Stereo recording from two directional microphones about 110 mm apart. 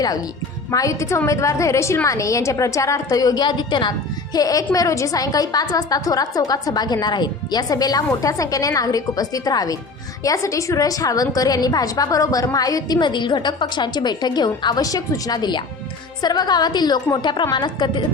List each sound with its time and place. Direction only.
0.7 s a woman's voice: 30° left (ahead or behind)
4.4 s a woman's voice: 35° left (ahead or behind)